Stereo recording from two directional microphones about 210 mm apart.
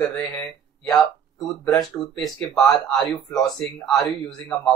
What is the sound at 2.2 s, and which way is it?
Speech, centre (ahead or behind).